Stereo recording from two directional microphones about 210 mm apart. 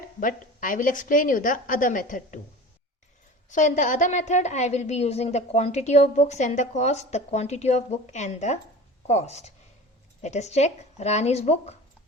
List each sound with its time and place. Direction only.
0.2 s a woman's voice: 40° left (ahead or behind)
3.5 s a woman's voice: 35° left (ahead or behind)